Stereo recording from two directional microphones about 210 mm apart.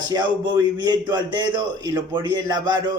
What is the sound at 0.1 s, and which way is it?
A man's voice, 20° right (ahead or behind).